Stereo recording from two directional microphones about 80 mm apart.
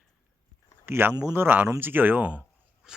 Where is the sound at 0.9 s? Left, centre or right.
Right.